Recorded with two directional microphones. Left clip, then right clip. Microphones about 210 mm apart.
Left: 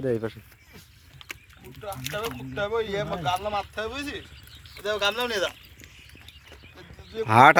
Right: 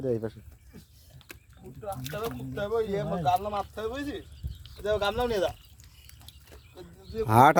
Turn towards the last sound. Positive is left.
turn(degrees=-15)  # may be behind; listen again after turning